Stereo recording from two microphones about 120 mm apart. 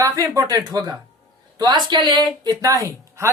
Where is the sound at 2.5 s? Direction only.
25° right (ahead or behind).